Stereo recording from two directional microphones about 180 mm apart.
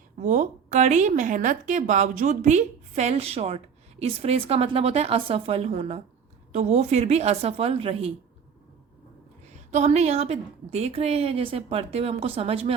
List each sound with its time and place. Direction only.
0.2 s a woman's voice: 40° right (ahead or behind)
9.7 s a woman's voice: 35° right (ahead or behind)